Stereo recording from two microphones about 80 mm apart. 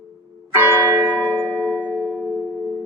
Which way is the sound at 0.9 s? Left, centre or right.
Right.